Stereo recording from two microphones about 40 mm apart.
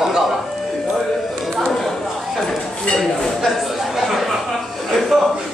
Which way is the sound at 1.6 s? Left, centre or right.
Centre.